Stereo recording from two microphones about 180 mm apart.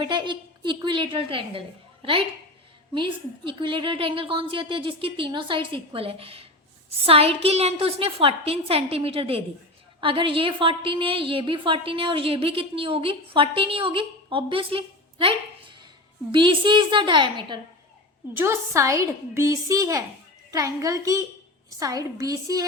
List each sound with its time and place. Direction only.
0.0 s a woman's voice: 25° right (ahead or behind)
18.3 s a woman's voice: 15° right (ahead or behind)